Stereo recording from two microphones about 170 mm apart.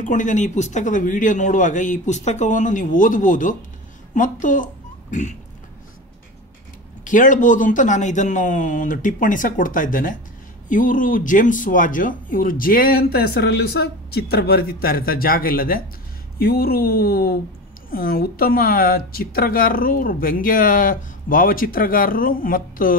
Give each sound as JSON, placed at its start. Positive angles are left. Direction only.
{"t": 0.0, "sound": "a man's voice", "side_deg": 50}
{"t": 7.1, "sound": "a man's voice", "side_deg": 50}